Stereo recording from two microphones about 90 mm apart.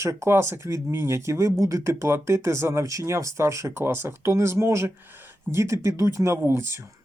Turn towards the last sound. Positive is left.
turn(degrees=-30)  # may be behind; listen again after turning